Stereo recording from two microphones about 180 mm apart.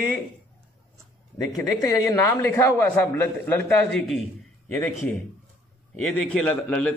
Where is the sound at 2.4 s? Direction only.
15° left (ahead or behind).